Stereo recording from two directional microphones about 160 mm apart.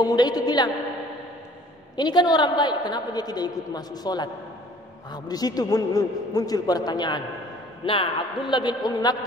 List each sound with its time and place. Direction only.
0.0 s a woman's voice: 25° left (ahead or behind)
2.0 s a woman's voice: 25° left (ahead or behind)